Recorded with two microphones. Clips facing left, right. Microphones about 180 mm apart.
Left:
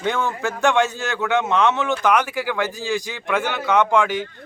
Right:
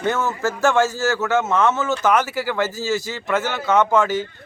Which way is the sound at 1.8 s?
5° right (ahead or behind).